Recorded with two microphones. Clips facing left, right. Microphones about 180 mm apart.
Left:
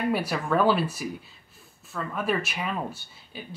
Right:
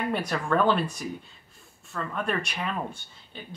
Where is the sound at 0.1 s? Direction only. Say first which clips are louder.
Left 1 dB; 5° left (ahead or behind).